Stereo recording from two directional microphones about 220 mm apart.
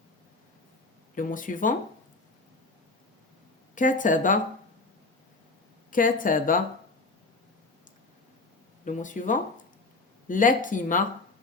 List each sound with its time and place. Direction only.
1.1 s speech: 35° left (ahead or behind)
3.8 s speech: 35° left (ahead or behind)
5.9 s speech: 40° left (ahead or behind)
8.8 s speech: 35° left (ahead or behind)